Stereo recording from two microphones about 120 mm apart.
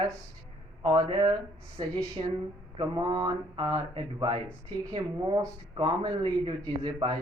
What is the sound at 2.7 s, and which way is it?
Speech, 35° right (ahead or behind).